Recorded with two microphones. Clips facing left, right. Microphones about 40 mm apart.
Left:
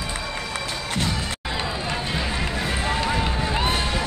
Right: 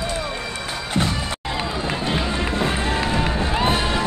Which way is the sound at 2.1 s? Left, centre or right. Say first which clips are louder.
Right 3 dB; right.